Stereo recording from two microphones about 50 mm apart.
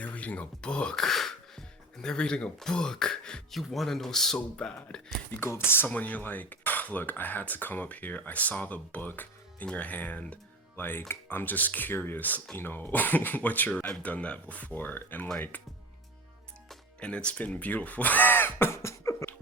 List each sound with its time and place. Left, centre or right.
0.0 s speech: left
1.0 s music: centre
2.6 s speech: centre
3.5 s speech: centre
4.4 s speech: left
5.4 s speech: left
5.9 s speech: left
10.8 s speech: left
17.0 s speech: left
18.7 s beatboxing: left